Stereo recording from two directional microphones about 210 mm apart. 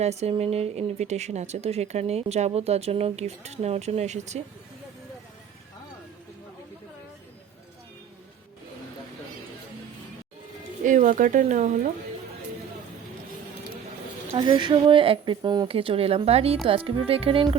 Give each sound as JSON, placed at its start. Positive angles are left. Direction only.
{"t": 0.0, "sound": "speech", "side_deg": -30}
{"t": 10.8, "sound": "speech", "side_deg": -35}
{"t": 14.3, "sound": "a woman's voice", "side_deg": -25}